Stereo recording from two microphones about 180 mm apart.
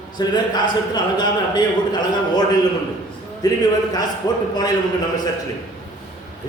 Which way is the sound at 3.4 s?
20° left (ahead or behind).